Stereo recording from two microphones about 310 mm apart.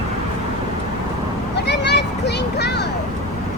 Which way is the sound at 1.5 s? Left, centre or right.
Left.